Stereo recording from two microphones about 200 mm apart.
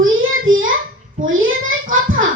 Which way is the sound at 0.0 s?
80° right.